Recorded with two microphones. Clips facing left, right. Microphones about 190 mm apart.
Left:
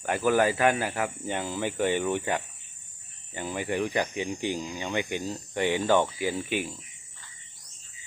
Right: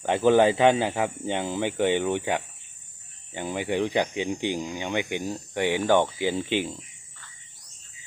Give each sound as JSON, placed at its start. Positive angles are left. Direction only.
{"t": 0.0, "sound": "speech", "side_deg": -25}